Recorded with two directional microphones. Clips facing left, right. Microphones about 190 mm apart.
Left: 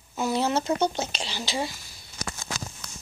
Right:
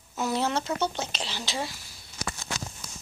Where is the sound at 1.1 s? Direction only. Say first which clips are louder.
Left 2 dB; centre (ahead or behind).